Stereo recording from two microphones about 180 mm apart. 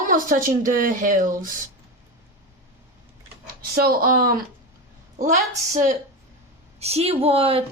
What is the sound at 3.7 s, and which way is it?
A woman's voice, 60° right (ahead or behind).